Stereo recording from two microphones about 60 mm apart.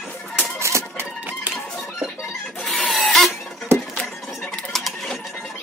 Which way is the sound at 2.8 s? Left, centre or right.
Centre.